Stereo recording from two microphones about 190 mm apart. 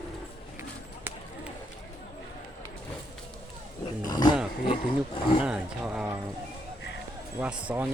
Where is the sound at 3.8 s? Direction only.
20° left (ahead or behind).